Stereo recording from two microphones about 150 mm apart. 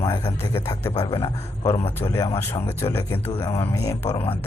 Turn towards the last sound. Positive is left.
turn(degrees=20)  # may be behind; listen again after turning